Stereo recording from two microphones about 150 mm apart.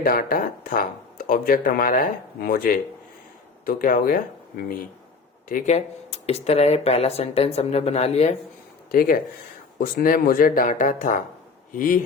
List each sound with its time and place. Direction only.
0.0 s speech: 70° left (ahead or behind)
5.7 s speech: 45° left (ahead or behind)
8.9 s speech: 70° left (ahead or behind)